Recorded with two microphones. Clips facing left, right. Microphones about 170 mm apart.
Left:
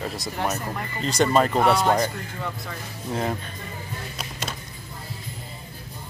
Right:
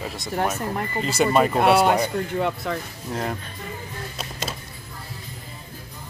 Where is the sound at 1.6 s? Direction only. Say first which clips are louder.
Right 2 dB; 65° right (ahead or behind).